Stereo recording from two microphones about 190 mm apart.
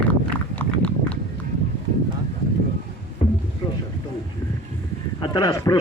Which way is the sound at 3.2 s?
35° left (ahead or behind).